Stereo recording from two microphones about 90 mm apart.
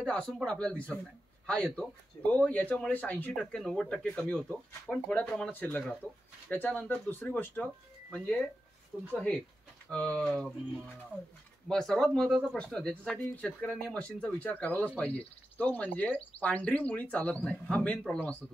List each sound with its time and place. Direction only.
0.0 s speech: 5° left (ahead or behind)
3.3 s speech: 5° left (ahead or behind)
11.7 s speech: 5° left (ahead or behind)